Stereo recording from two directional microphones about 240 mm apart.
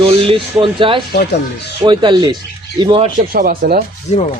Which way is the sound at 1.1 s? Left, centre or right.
Left.